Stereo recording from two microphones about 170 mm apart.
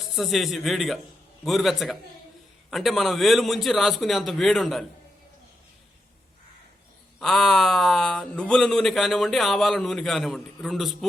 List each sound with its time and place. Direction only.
0.2 s speech: centre (ahead or behind)
7.2 s speech: centre (ahead or behind)